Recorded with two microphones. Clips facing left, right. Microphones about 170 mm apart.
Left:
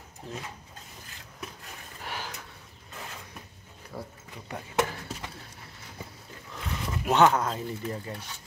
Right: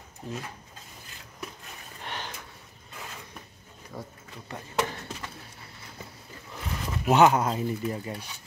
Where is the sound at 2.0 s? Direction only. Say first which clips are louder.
Even; 5° left (ahead or behind).